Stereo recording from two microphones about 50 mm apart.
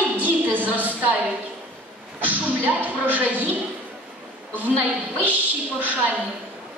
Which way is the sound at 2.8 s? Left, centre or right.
Right.